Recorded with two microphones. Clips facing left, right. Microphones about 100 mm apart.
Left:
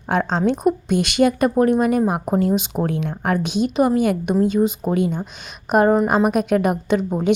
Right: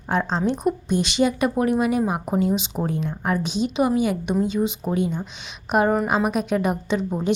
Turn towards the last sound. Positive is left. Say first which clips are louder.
# left 4 dB
turn(degrees=55)  # may be behind; listen again after turning